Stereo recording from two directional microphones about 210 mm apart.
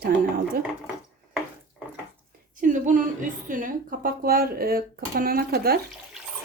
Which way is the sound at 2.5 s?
35° right (ahead or behind).